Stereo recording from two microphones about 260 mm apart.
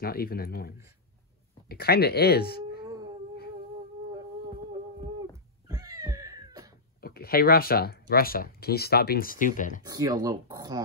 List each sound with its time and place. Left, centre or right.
0.0 s speech: left
2.8 s a sound: centre
5.7 s cat: centre
7.0 s speech: left
9.8 s speech: centre